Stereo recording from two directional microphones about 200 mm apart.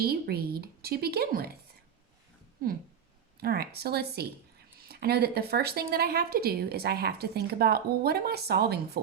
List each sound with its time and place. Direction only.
0.0 s speech: 50° right (ahead or behind)
3.4 s speech: 50° right (ahead or behind)